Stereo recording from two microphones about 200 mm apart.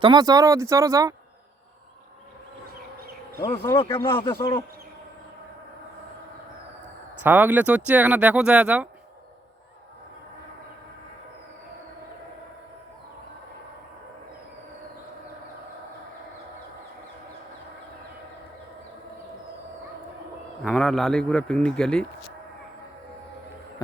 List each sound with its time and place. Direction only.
0.0 s speech: 20° right (ahead or behind)
3.4 s speech: 20° left (ahead or behind)
4.1 s speech: 25° left (ahead or behind)
7.2 s speech: 10° right (ahead or behind)
20.7 s a man's voice: centre (ahead or behind)